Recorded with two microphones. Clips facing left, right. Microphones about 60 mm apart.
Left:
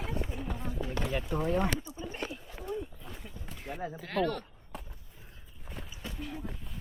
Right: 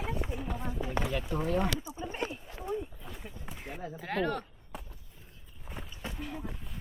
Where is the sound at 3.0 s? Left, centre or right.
Centre.